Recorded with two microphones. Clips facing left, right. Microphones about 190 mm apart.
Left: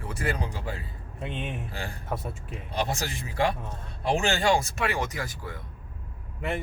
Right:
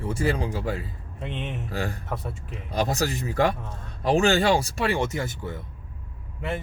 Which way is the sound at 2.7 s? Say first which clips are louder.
Right 5 dB; 40° right (ahead or behind).